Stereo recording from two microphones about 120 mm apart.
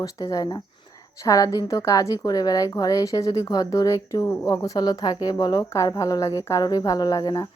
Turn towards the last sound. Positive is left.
turn(degrees=35)  # may be behind; listen again after turning